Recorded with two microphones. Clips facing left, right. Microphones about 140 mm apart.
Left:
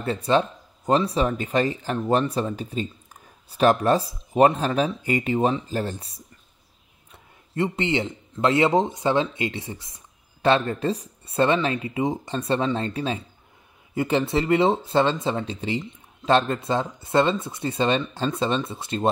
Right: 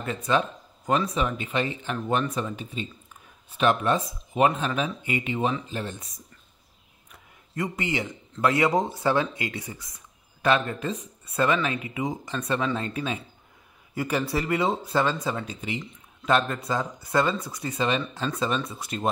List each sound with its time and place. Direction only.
0.0 s a man's voice: 30° left (ahead or behind)